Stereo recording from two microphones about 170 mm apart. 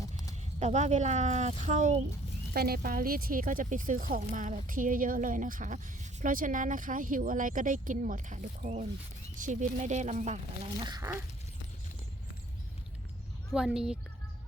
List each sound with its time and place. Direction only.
0.6 s speech: 40° right (ahead or behind)
2.5 s speech: 65° right (ahead or behind); by 10.4 s 45° right (ahead or behind)
10.8 s speech: 20° right (ahead or behind)
13.5 s speech: 5° right (ahead or behind)